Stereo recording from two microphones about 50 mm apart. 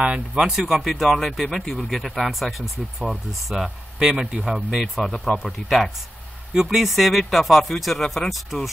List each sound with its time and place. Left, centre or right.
0.0 s speech: right
0.4 s speech: centre
4.0 s speech: centre
4.6 s speech: centre
4.8 s speech: centre